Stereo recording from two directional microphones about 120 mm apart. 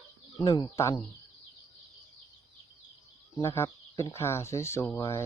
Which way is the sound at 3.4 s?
25° left (ahead or behind).